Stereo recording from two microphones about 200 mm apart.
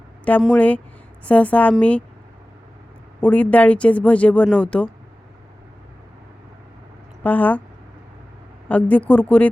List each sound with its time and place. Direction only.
0.4 s speech: 5° left (ahead or behind)
3.2 s speech: 5° left (ahead or behind)
7.2 s speech: 10° left (ahead or behind)
8.7 s speech: 5° left (ahead or behind)